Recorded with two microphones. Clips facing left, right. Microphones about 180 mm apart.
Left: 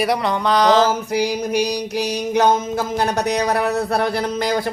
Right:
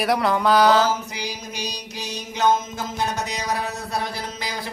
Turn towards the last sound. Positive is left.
turn(degrees=55)  # may be behind; listen again after turning